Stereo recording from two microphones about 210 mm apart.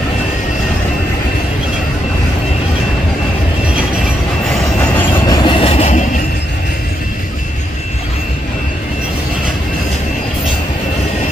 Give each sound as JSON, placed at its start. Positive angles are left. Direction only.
{"t": 4.9, "sound": "train", "side_deg": 15}